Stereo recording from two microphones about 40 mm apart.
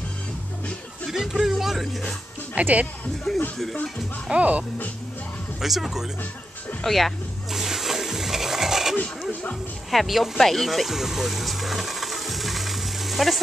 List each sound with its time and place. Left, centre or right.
1.1 s music: centre
2.5 s speech: right
3.3 s speech: centre
4.3 s speech: right
5.6 s speech: centre
7.5 s music: centre
9.8 s speech: centre
10.4 s a sound: centre